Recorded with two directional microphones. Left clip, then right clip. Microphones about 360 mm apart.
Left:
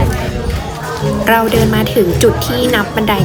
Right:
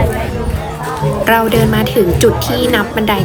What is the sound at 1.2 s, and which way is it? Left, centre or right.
A woman's voice, centre.